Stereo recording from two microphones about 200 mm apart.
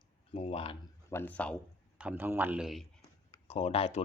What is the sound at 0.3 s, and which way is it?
Speech, 25° left (ahead or behind).